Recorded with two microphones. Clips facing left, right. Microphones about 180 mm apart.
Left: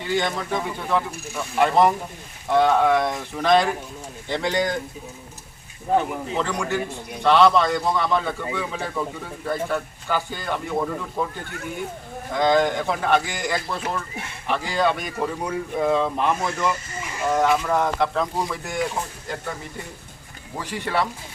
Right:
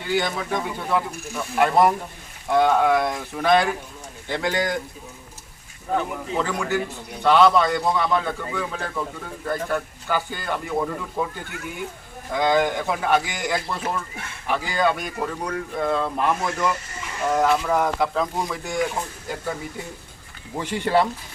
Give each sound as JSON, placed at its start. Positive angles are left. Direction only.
{"t": 0.0, "sound": "speech", "side_deg": -5}
{"t": 6.3, "sound": "speech", "side_deg": -5}
{"t": 12.3, "sound": "speech", "side_deg": -5}
{"t": 20.6, "sound": "speech", "side_deg": -25}